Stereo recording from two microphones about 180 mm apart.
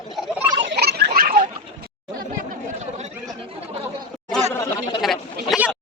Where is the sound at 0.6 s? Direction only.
65° right (ahead or behind).